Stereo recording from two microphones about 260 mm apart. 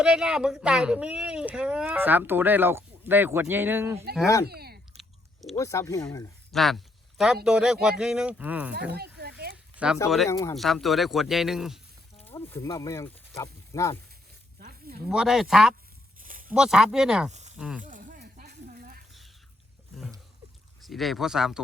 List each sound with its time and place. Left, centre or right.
0.0 s speech: centre
4.4 s a sound: right
4.9 s chewing: centre
5.5 s speech: centre
9.7 s speech: centre
10.2 s speech: centre
10.5 s speech: centre
12.2 s speech: centre
14.6 s a sound: right
15.1 s speech: centre
16.2 s a sound: right
16.5 s speech: centre
17.8 s a sound: right
20.8 s speech: centre